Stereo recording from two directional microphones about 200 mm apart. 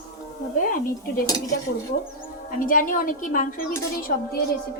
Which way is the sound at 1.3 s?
20° left (ahead or behind).